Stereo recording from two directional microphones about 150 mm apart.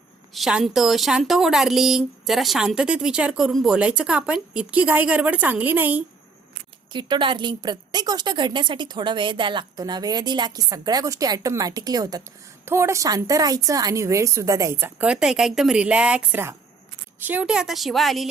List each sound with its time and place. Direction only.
0.3 s speech: centre (ahead or behind)
6.9 s a woman's voice: 30° right (ahead or behind); by 18.3 s centre (ahead or behind)